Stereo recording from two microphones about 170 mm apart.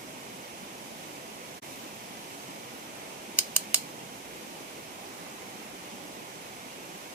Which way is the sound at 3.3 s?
10° right (ahead or behind).